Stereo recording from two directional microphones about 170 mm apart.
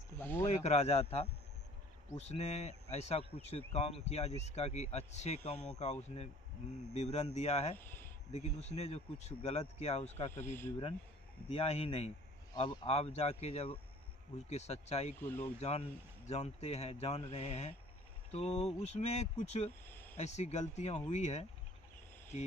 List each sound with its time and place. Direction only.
0.2 s speech: 10° left (ahead or behind)
0.4 s speech: 40° left (ahead or behind)
2.3 s speech: 40° left (ahead or behind)
7.8 s speech: 10° left (ahead or behind)
8.3 s speech: 40° left (ahead or behind)
10.3 s speech: 15° left (ahead or behind)
11.4 s speech: 35° left (ahead or behind)
12.5 s speech: 25° left (ahead or behind)
12.9 s speech: 35° left (ahead or behind)
15.2 s speech: 10° left (ahead or behind)
15.6 s speech: 35° left (ahead or behind)